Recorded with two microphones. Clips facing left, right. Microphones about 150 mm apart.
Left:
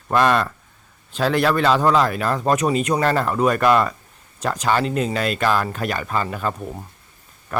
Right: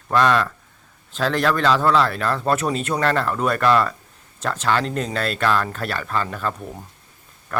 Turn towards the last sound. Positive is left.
turn(degrees=10)  # may be behind; listen again after turning